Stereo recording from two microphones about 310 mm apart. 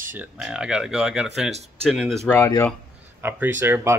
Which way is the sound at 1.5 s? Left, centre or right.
Right.